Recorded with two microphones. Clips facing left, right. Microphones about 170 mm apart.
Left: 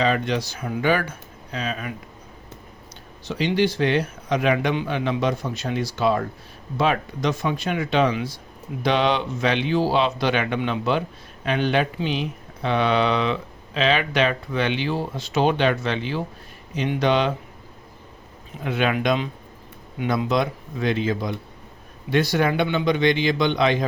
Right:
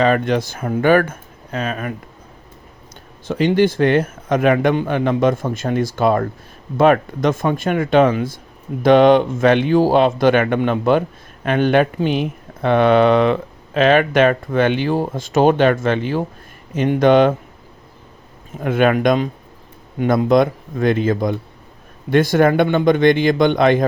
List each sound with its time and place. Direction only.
0.0 s speech: 50° right (ahead or behind)
3.2 s speech: 50° right (ahead or behind)
18.6 s speech: 50° right (ahead or behind)